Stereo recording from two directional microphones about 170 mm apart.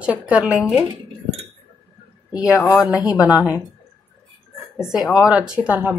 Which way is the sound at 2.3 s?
20° left (ahead or behind).